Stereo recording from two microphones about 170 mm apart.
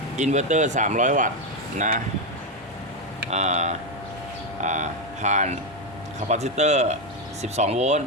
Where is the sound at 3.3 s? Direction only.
40° right (ahead or behind).